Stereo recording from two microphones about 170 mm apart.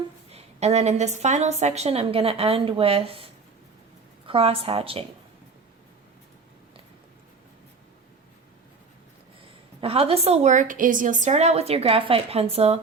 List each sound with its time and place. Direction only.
0.3 s a woman's voice: 40° right (ahead or behind)
4.3 s a woman's voice: 35° right (ahead or behind)
9.8 s a woman's voice: 35° right (ahead or behind)